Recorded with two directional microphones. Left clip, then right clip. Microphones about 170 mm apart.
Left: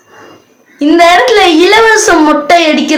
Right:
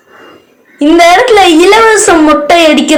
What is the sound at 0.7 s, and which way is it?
A woman's voice, 25° right (ahead or behind).